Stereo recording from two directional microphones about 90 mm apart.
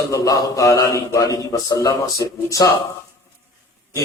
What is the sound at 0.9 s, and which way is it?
Speech, 35° left (ahead or behind).